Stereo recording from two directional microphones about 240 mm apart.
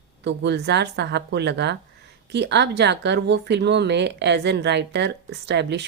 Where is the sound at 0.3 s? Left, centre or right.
Right.